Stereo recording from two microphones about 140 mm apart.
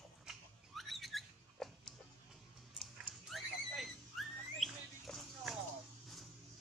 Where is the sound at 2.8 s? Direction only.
Centre (ahead or behind).